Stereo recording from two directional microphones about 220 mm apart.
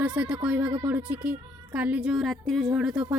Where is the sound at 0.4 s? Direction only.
5° right (ahead or behind).